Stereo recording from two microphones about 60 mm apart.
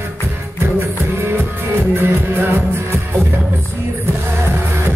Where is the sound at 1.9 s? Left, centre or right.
Right.